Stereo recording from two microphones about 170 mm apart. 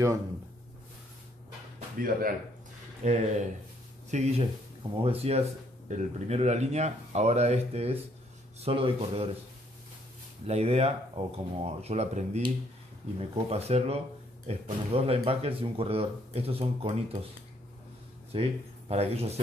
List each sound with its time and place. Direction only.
2.0 s speech: 60° right (ahead or behind)
3.0 s speech: 40° right (ahead or behind)
10.4 s speech: 40° right (ahead or behind)
13.5 s speech: 40° right (ahead or behind)
18.3 s speech: 35° right (ahead or behind)